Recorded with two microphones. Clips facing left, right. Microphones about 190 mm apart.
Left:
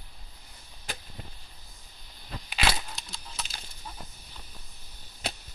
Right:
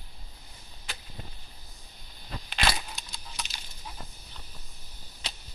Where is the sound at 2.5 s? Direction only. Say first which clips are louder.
Even; 5° left (ahead or behind).